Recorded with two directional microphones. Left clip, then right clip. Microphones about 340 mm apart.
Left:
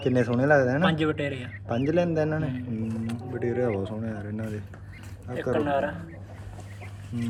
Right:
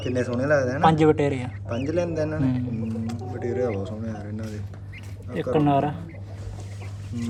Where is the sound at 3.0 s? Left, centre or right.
Centre.